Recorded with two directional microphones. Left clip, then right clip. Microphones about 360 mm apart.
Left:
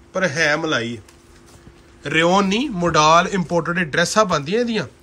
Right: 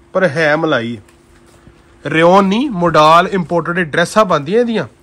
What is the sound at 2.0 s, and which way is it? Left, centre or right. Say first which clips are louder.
Speech: right 7 dB; centre.